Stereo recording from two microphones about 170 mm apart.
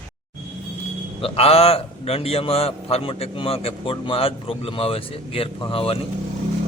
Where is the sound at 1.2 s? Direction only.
35° left (ahead or behind).